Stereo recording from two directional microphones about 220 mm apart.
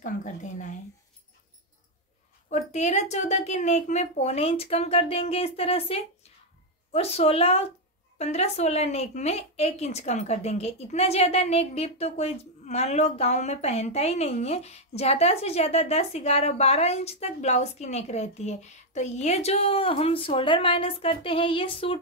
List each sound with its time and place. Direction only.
0.0 s a woman's voice: 35° left (ahead or behind)
2.5 s a woman's voice: 30° left (ahead or behind)